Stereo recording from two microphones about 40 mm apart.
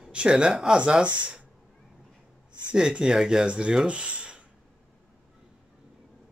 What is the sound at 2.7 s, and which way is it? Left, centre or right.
Speech, right.